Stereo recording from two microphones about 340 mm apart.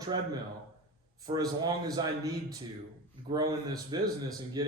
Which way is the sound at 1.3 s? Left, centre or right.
Centre.